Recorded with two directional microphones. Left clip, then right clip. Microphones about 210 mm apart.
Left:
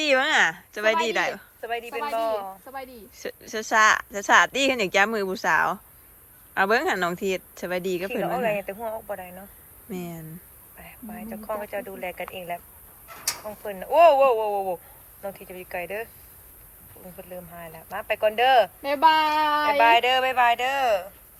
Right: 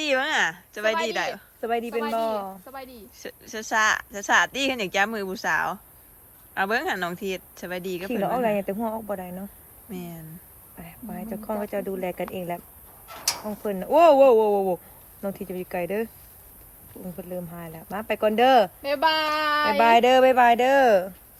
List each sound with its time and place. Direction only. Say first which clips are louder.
0.0 s a woman's voice: left 3 dB; 15° right (ahead or behind)
1.6 s speech: right 3 dB; 50° right (ahead or behind)
2.8 s a woman's voice: left 3 dB; 10° right (ahead or behind)
8.2 s speech: right 3 dB; 55° right (ahead or behind)
9.9 s a woman's voice: left 3 dB; 10° right (ahead or behind)
10.8 s speech: right 2 dB; 50° right (ahead or behind)
17.2 s speech: right 3 dB; 50° right (ahead or behind)